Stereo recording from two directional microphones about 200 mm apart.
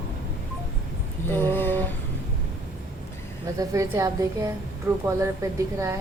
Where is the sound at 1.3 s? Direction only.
10° left (ahead or behind).